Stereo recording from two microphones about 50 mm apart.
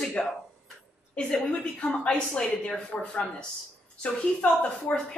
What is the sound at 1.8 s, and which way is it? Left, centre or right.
A woman's voice, left.